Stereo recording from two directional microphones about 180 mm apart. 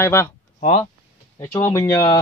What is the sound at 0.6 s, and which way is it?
Speech, 35° left (ahead or behind).